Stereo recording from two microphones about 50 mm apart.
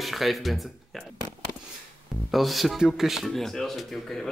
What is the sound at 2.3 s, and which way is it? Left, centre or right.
Speech, centre.